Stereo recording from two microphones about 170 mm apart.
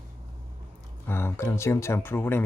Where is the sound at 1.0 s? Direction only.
15° left (ahead or behind).